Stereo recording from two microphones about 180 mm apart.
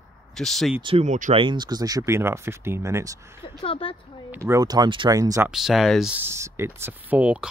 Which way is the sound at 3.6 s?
30° left (ahead or behind).